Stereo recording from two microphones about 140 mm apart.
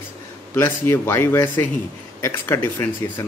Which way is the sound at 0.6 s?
15° left (ahead or behind).